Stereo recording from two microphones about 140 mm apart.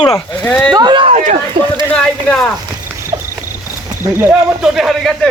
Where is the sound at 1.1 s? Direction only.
55° right (ahead or behind).